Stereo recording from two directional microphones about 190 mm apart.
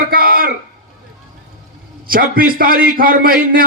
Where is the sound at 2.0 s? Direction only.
50° right (ahead or behind).